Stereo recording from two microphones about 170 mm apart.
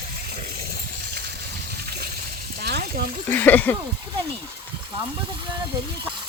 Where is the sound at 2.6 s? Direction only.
70° right (ahead or behind).